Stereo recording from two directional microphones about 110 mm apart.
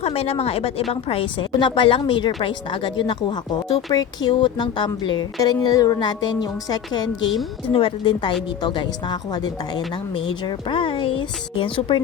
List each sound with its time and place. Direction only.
0.0 s speech: 65° left (ahead or behind)
1.0 s a woman's voice: 55° left (ahead or behind)
7.7 s a woman's voice: 55° left (ahead or behind)